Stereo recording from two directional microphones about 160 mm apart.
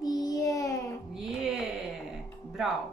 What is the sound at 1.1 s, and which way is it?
Music, centre (ahead or behind).